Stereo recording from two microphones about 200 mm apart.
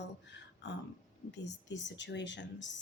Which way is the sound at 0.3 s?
60° left (ahead or behind).